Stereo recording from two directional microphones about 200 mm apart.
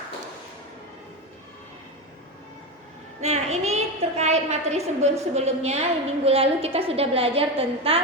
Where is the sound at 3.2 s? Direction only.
35° right (ahead or behind).